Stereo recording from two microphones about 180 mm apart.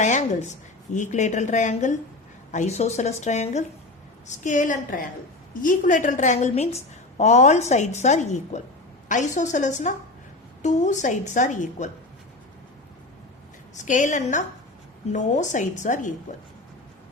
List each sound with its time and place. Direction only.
0.0 s a woman's voice: 40° left (ahead or behind)
13.7 s a woman's voice: 45° left (ahead or behind)